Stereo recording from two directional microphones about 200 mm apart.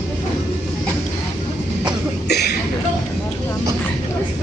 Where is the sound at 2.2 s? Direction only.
55° left (ahead or behind).